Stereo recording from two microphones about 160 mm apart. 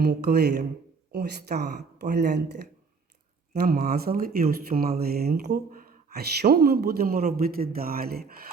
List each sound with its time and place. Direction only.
0.0 s speech: 80° right
3.5 s speech: 75° right (ahead or behind)